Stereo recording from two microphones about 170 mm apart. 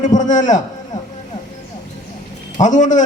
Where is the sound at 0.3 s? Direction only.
45° left (ahead or behind).